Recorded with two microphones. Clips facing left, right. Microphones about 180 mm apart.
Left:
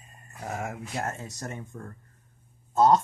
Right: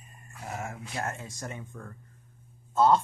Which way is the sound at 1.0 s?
40° left (ahead or behind).